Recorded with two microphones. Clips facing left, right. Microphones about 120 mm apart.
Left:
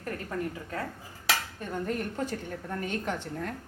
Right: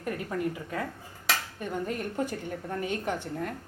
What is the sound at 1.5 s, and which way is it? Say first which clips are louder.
A woman's voice: even; 10° right (ahead or behind).